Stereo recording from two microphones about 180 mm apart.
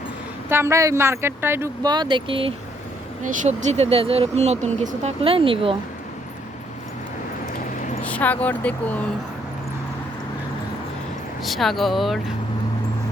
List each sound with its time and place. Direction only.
0.5 s speech: 15° right (ahead or behind)
3.2 s speech: 40° right (ahead or behind)
8.0 s speech: 10° left (ahead or behind)
11.4 s speech: centre (ahead or behind)